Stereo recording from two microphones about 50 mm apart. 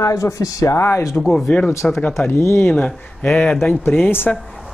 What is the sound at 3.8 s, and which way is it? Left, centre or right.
Speech, left.